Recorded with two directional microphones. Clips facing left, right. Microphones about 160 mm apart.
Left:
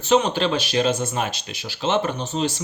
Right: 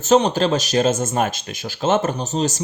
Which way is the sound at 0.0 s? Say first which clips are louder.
Right 3 dB; 40° right (ahead or behind).